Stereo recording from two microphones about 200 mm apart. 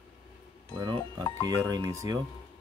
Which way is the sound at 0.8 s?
20° right (ahead or behind).